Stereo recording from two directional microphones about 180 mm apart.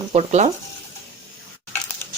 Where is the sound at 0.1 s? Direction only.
40° right (ahead or behind).